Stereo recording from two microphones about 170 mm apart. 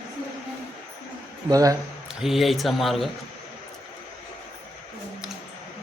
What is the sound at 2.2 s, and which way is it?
Speech, centre (ahead or behind).